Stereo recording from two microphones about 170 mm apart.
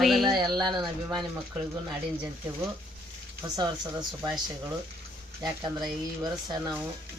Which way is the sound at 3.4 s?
20° right (ahead or behind).